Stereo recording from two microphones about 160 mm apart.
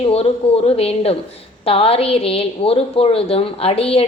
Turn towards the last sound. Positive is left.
turn(degrees=40)  # may be behind; listen again after turning